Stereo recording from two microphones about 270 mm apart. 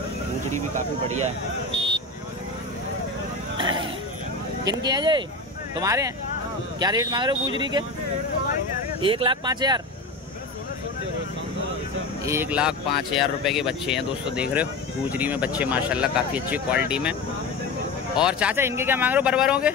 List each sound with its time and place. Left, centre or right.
3.5 s a sound: centre
4.6 s speech: centre
9.0 s speech: centre
12.3 s speech: centre
18.1 s speech: centre